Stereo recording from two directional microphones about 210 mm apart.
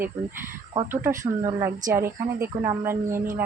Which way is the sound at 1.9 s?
15° right (ahead or behind).